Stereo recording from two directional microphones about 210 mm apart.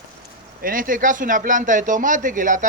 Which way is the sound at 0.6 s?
40° right (ahead or behind).